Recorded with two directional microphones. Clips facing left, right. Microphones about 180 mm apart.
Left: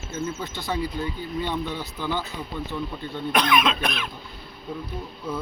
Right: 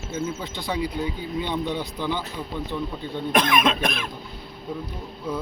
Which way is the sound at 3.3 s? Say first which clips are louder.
Right 1 dB; 45° right (ahead or behind).